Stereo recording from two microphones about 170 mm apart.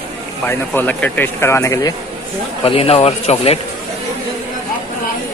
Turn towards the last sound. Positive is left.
turn(degrees=40)  # may be behind; listen again after turning